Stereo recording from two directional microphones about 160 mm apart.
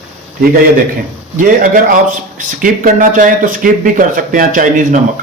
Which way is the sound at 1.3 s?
55° right (ahead or behind).